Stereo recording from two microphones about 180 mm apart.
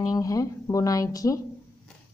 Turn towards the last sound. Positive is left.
turn(degrees=20)  # may be behind; listen again after turning